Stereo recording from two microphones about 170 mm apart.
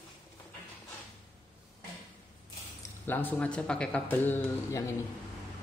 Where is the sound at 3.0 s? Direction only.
10° left (ahead or behind).